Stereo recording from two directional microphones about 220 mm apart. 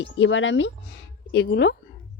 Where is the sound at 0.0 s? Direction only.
60° left (ahead or behind).